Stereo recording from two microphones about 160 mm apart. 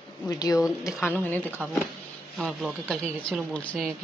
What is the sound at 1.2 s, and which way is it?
Speech, 10° left (ahead or behind).